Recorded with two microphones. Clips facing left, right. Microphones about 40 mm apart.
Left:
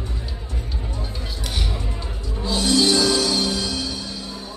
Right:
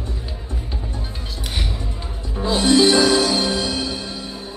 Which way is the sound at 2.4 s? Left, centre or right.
Right.